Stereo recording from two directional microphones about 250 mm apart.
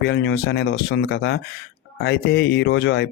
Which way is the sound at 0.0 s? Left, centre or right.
Left.